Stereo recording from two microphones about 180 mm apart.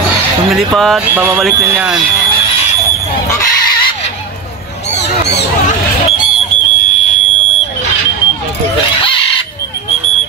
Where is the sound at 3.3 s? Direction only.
25° left (ahead or behind).